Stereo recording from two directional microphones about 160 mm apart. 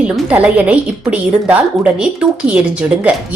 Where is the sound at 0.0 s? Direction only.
10° right (ahead or behind).